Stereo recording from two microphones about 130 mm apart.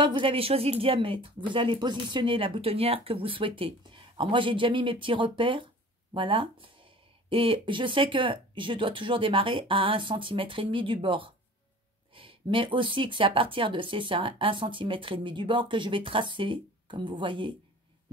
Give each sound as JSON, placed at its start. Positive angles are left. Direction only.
{"t": 0.0, "sound": "speech", "side_deg": -40}